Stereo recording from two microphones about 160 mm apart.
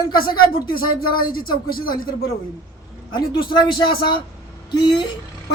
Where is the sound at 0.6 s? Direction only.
65° left (ahead or behind).